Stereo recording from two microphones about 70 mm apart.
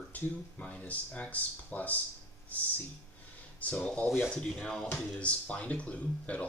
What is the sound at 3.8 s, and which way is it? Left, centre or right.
Speech, centre.